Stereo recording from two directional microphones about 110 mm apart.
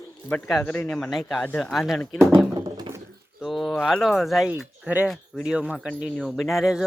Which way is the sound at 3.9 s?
Centre (ahead or behind).